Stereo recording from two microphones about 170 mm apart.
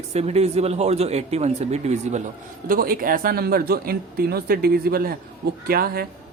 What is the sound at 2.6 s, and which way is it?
Speech, 55° right (ahead or behind).